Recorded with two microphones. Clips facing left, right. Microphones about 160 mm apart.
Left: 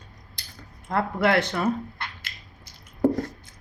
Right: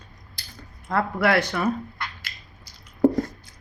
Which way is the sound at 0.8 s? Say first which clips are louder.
Right 1 dB; 25° left (ahead or behind).